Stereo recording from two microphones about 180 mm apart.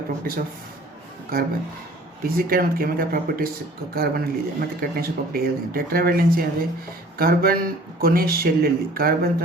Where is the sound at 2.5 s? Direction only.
55° right (ahead or behind).